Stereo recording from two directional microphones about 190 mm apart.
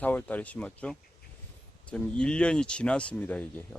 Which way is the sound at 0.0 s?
10° left (ahead or behind).